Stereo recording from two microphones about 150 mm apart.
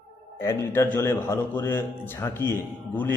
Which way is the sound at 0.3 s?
15° left (ahead or behind).